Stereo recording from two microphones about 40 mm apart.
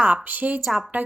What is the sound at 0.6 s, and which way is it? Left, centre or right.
Speech, centre.